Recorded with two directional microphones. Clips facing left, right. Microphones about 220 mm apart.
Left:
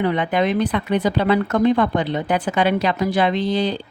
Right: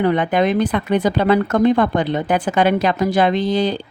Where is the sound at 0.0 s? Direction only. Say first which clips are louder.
Right 3 dB; 45° right (ahead or behind).